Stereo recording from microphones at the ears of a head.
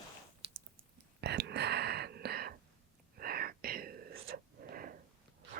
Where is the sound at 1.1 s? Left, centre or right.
Right.